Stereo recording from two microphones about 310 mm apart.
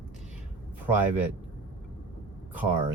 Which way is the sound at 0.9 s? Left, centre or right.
Centre.